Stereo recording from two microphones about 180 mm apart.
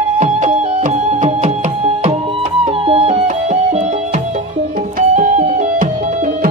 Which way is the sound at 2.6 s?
30° right (ahead or behind).